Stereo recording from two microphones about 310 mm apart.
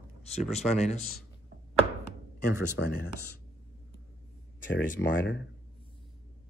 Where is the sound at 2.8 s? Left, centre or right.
Left.